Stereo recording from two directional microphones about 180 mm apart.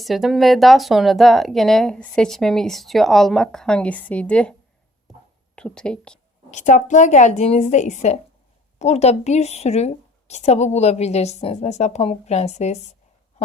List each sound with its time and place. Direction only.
0.0 s speech: centre (ahead or behind)
5.5 s speech: 5° left (ahead or behind)
6.5 s a woman's voice: 40° left (ahead or behind)